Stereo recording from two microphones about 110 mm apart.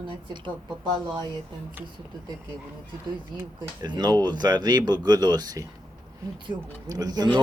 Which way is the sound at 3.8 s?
40° right (ahead or behind).